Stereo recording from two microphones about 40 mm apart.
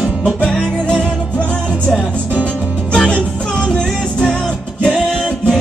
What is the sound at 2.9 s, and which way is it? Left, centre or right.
Music, left.